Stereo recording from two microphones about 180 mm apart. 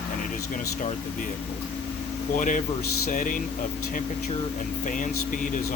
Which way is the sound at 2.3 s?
45° left (ahead or behind).